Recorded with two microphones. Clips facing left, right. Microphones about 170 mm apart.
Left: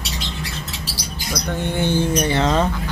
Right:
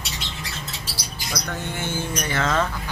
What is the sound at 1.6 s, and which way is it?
Speech, 35° left (ahead or behind).